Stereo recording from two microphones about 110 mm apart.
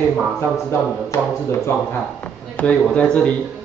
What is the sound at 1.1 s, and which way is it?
Speech, 30° left (ahead or behind).